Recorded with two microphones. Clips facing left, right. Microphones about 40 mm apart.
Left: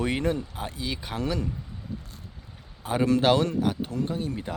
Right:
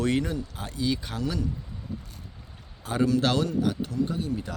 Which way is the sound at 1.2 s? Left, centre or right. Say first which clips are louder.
Left 1 dB; left.